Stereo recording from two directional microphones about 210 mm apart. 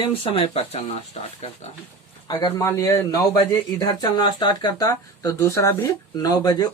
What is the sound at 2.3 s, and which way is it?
A man's voice, 20° left (ahead or behind).